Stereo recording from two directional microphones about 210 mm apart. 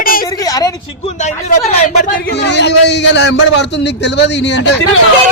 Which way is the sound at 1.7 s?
30° left (ahead or behind).